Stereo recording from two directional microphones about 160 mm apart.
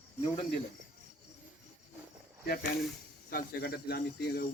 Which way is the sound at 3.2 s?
75° left (ahead or behind).